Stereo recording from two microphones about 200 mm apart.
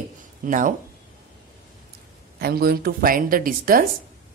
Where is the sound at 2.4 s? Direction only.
50° right (ahead or behind).